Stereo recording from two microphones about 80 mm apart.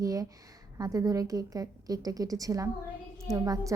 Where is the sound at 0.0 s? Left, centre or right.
Right.